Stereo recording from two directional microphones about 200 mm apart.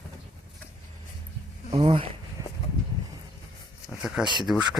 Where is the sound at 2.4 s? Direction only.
15° right (ahead or behind).